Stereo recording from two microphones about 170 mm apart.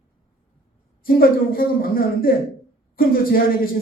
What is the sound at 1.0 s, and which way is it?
A man's voice, 60° left (ahead or behind).